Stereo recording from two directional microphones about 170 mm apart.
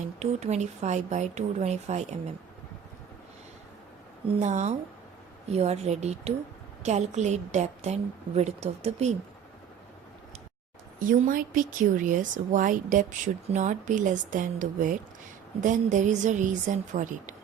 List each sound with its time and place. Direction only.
0.2 s speech: 40° right (ahead or behind)
4.3 s speech: 45° right (ahead or behind)
11.0 s speech: 55° right (ahead or behind)